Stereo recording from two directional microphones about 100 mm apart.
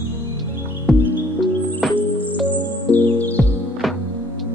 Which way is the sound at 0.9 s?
5° left (ahead or behind).